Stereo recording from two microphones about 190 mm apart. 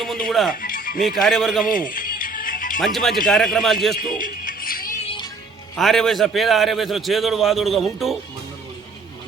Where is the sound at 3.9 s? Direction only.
45° left (ahead or behind).